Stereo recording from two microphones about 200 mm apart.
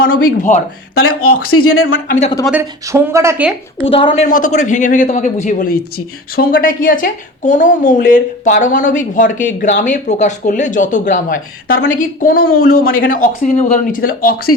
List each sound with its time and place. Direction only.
0.1 s speech: 45° left (ahead or behind)
0.9 s speech: 90° left
2.0 s speech: 35° left (ahead or behind)
2.5 s speech: 15° right (ahead or behind)
3.8 s a woman's voice: 30° left (ahead or behind)
4.3 s speech: 40° left (ahead or behind)